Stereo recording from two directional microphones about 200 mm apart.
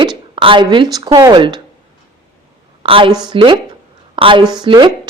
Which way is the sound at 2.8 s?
25° right (ahead or behind).